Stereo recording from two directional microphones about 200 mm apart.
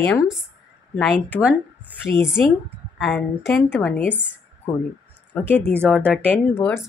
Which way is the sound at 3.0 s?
5° left (ahead or behind).